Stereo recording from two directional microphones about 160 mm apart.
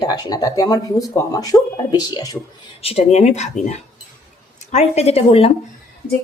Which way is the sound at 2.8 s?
40° left (ahead or behind).